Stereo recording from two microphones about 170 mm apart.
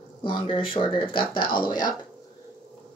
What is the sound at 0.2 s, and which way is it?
Speech, 30° left (ahead or behind).